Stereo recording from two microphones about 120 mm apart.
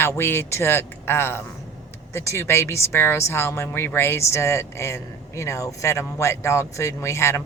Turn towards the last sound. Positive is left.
turn(degrees=25)  # may be behind; listen again after turning